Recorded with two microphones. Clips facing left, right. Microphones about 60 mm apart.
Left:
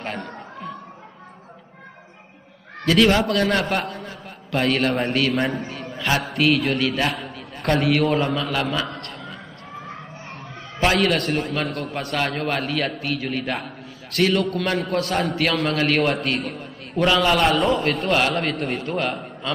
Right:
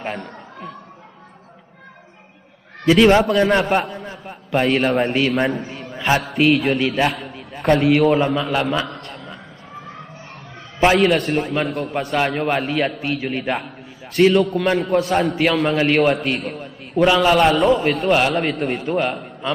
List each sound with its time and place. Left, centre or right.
0.0 s a sound: centre
2.9 s a man's voice: centre
4.5 s a man's voice: centre
4.8 s a man's voice: centre
6.9 s a sound: centre
8.4 s a man's voice: centre
8.9 s a sound: centre
10.8 s a man's voice: centre
12.2 s a man's voice: centre